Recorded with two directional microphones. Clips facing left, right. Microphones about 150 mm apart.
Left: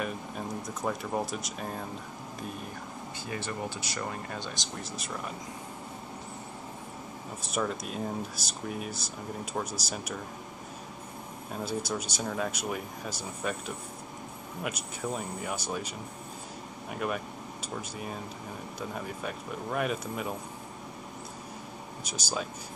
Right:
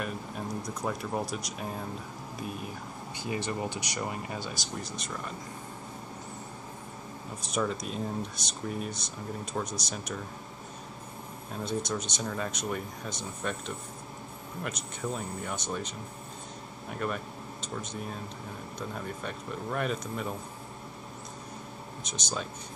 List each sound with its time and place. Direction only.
0.8 s speech: centre (ahead or behind)
3.3 s speech: 15° right (ahead or behind)
4.9 s speech: 5° left (ahead or behind)
7.5 s speech: 5° left (ahead or behind)
11.6 s speech: 5° left (ahead or behind)
16.9 s speech: 5° left (ahead or behind)
22.0 s speech: 5° left (ahead or behind)